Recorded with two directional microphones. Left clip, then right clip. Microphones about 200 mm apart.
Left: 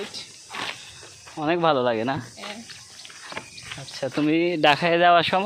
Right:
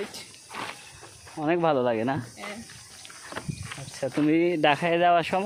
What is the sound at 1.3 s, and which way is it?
Speech, 5° right (ahead or behind).